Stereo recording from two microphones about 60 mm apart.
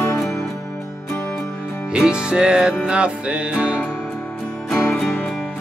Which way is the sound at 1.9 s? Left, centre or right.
Centre.